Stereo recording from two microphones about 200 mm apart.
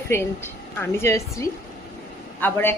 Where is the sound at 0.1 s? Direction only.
10° left (ahead or behind).